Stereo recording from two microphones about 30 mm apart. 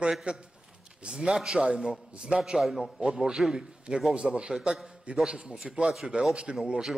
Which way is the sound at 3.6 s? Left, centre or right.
Right.